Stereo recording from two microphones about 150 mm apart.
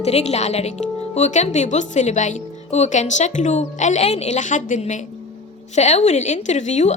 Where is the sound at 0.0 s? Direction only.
45° left (ahead or behind).